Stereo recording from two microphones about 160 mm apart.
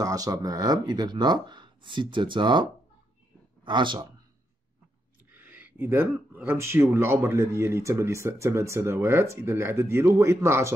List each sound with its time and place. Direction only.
0.0 s speech: 20° right (ahead or behind)
3.6 s speech: 30° right (ahead or behind)
5.3 s speech: 10° right (ahead or behind)